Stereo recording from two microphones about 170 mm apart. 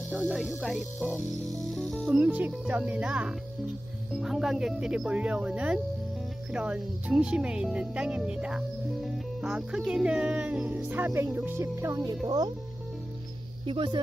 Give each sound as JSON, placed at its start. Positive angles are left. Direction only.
{"t": 0.1, "sound": "speech", "side_deg": 0}
{"t": 2.0, "sound": "speech", "side_deg": -10}
{"t": 13.7, "sound": "speech", "side_deg": -30}